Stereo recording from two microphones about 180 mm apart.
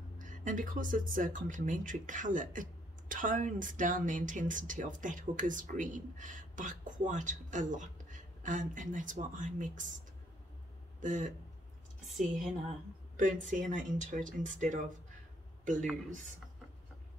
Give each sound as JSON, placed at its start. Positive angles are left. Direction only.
{"t": 0.2, "sound": "speech", "side_deg": -45}
{"t": 11.0, "sound": "speech", "side_deg": -45}
{"t": 13.1, "sound": "speech", "side_deg": -45}